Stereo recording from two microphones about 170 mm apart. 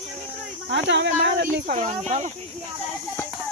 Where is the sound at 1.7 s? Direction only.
40° right (ahead or behind).